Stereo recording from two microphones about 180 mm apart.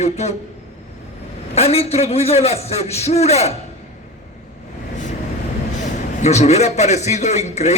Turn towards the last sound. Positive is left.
turn(degrees=40)  # may be behind; listen again after turning